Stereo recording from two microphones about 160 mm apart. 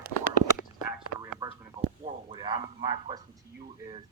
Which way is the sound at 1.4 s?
20° right (ahead or behind).